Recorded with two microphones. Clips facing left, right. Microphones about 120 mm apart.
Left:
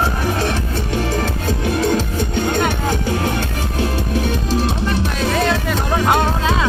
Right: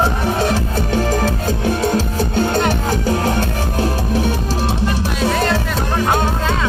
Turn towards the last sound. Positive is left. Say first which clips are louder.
# even
turn(degrees=0)  # may be behind; listen again after turning